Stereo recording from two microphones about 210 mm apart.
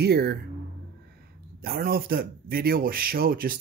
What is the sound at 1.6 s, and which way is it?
Speech, 45° right (ahead or behind).